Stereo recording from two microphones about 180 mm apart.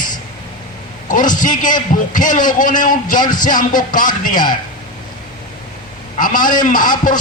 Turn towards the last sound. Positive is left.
turn(degrees=45)  # may be behind; listen again after turning